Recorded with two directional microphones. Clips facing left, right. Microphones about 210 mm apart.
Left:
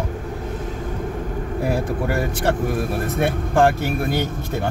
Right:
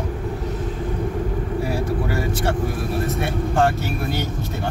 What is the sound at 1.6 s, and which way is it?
Speech, 55° left (ahead or behind).